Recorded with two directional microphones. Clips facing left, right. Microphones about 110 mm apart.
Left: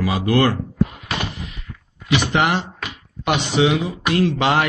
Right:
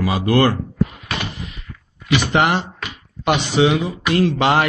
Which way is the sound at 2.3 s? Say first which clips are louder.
Right 2 dB; 40° right (ahead or behind).